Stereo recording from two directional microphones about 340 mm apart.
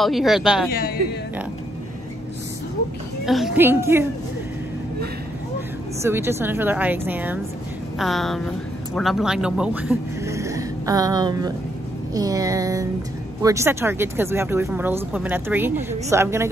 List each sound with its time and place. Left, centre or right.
0.0 s speech: centre
0.7 s a man's voice: left
3.3 s speech: centre
6.0 s speech: centre